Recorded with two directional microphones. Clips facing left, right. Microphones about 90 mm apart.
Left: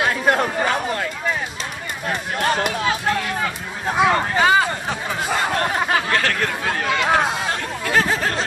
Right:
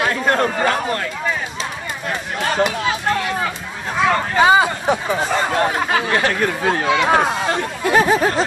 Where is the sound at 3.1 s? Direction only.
Centre (ahead or behind).